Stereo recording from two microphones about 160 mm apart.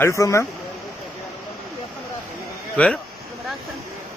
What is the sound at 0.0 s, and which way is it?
Speech, 20° left (ahead or behind).